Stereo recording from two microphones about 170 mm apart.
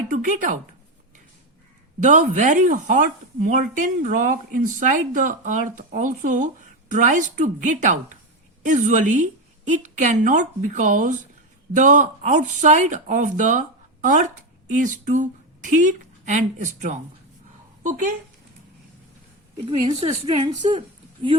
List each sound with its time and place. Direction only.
0.1 s a woman's voice: 50° right (ahead or behind)
2.0 s a woman's voice: 45° right (ahead or behind)
19.6 s a woman's voice: 30° right (ahead or behind)